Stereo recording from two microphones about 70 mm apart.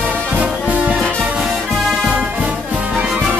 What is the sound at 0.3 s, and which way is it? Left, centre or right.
Music, centre.